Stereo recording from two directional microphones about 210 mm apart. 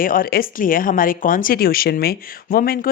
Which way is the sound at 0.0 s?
40° left (ahead or behind).